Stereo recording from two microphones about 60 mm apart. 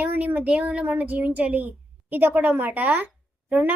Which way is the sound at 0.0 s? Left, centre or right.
Right.